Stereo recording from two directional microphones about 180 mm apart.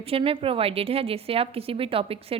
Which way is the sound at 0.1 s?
30° right (ahead or behind).